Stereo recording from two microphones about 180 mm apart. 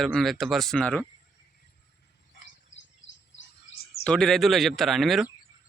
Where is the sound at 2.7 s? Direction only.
90° left.